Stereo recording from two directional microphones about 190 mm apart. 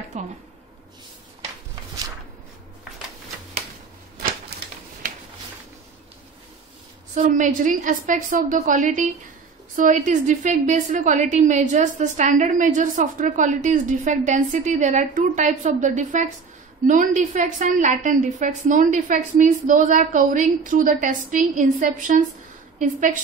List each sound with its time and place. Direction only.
0.1 s a woman's voice: 35° right (ahead or behind)
4.5 s a sound: 60° right (ahead or behind)
7.2 s a woman's voice: 40° right (ahead or behind)